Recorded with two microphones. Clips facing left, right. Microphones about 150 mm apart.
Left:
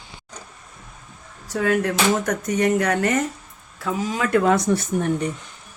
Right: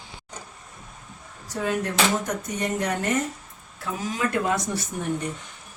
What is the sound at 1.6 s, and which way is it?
Speech, 90° left.